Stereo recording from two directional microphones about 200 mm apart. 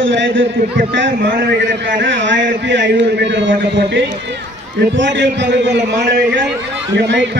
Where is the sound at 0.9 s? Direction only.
55° right (ahead or behind).